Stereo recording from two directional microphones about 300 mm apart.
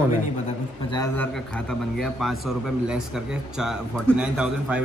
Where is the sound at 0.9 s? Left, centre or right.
Centre.